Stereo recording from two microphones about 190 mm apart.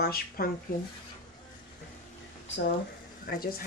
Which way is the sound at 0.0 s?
50° left (ahead or behind).